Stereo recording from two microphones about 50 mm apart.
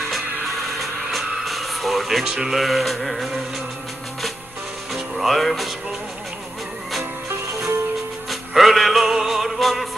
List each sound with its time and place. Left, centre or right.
0.1 s music: centre
4.9 s music: centre
7.2 s music: right
8.3 s music: centre